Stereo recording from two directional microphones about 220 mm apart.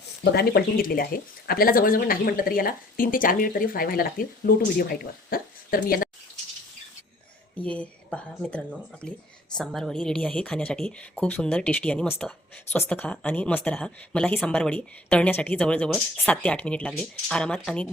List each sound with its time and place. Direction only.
0.3 s speech: 45° left (ahead or behind)
7.5 s a woman's voice: 5° left (ahead or behind)